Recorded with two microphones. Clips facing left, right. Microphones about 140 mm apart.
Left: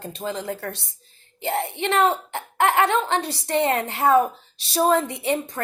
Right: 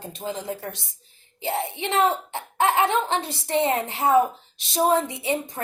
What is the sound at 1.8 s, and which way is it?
Speech, 65° left (ahead or behind).